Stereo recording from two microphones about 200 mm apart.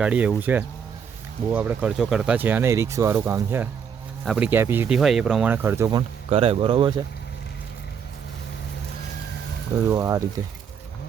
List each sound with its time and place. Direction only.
0.0 s speech: 5° right (ahead or behind)
6.3 s speech: 30° right (ahead or behind)
9.9 s speech: 15° right (ahead or behind)